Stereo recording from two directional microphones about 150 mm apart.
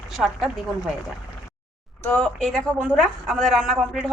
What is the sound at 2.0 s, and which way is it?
A woman's voice, 5° left (ahead or behind).